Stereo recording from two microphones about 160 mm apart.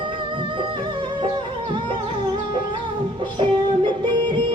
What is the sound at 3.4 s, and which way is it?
Music, 30° right (ahead or behind).